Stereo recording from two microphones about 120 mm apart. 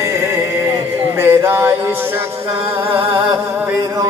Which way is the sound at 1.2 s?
20° right (ahead or behind).